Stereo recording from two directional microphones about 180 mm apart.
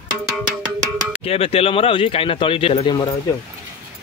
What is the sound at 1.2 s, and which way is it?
Speech, 30° left (ahead or behind).